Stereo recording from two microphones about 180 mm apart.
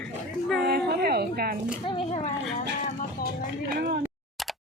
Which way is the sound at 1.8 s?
30° left (ahead or behind).